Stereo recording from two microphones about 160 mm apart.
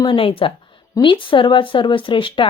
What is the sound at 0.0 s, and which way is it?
A woman's voice, 30° left (ahead or behind).